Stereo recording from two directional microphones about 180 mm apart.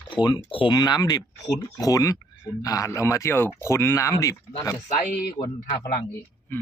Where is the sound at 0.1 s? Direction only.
25° left (ahead or behind).